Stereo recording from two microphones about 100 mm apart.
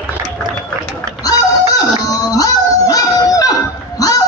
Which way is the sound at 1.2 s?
40° left (ahead or behind).